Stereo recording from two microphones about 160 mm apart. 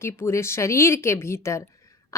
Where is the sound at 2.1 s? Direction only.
20° left (ahead or behind).